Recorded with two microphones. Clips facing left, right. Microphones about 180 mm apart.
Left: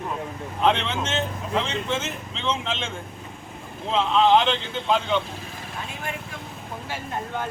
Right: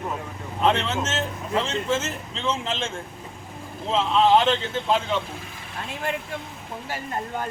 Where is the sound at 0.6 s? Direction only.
Centre (ahead or behind).